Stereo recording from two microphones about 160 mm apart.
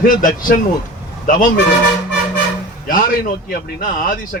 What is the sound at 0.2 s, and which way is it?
Speech, 55° left (ahead or behind).